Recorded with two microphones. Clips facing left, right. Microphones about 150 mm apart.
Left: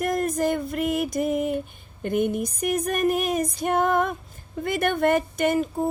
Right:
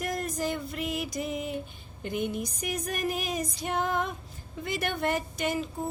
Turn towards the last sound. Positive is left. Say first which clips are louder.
# left 8 dB
turn(degrees=55)  # may be behind; listen again after turning